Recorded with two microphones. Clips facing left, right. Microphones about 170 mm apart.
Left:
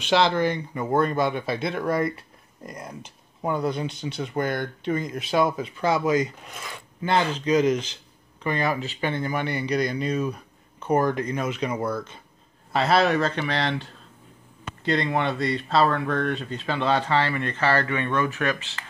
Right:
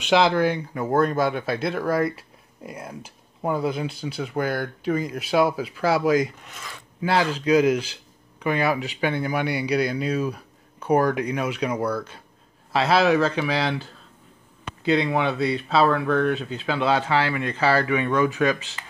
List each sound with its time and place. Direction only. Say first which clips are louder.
0.1 s speech: right 2 dB; 5° right (ahead or behind)